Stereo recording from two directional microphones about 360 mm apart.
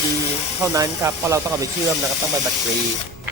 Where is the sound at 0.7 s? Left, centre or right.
Centre.